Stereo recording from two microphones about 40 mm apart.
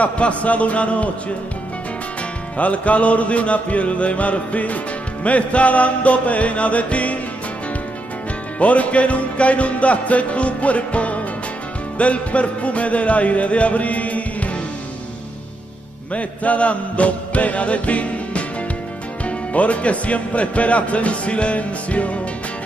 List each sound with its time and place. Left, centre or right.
0.0 s speech: left
2.5 s speech: left
8.5 s speech: left
16.1 s speech: left